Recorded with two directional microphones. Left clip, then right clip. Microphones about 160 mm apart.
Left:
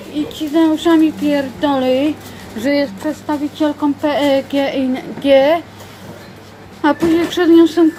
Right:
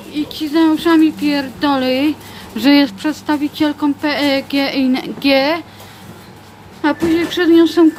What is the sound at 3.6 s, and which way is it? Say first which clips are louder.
Speech: left 3 dB; 25° right (ahead or behind).